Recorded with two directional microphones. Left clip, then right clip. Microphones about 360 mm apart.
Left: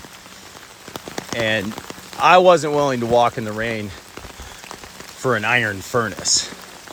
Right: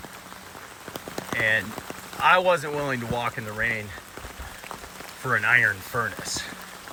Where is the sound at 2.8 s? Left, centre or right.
Centre.